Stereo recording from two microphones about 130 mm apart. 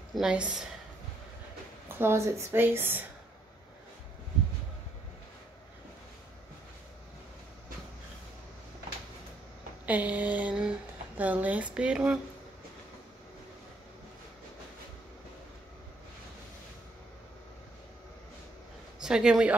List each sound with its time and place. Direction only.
0.1 s speech: 5° right (ahead or behind)
2.0 s speech: 20° right (ahead or behind)
9.8 s speech: 10° right (ahead or behind)
18.9 s a man's voice: 5° right (ahead or behind)